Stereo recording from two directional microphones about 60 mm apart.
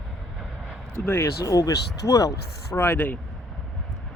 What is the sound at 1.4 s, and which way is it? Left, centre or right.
Speech, left.